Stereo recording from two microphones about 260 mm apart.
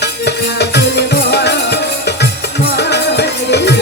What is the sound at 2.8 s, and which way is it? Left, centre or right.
Music, left.